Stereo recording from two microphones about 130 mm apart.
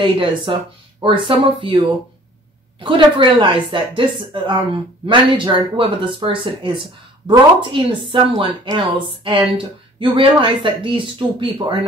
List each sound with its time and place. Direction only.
0.0 s speech: 40° right (ahead or behind)
2.8 s speech: 40° right (ahead or behind)